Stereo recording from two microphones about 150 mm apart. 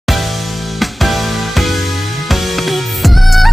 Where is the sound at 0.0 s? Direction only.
Centre (ahead or behind).